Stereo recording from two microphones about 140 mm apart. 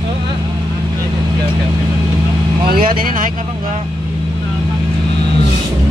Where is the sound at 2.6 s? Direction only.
90° right.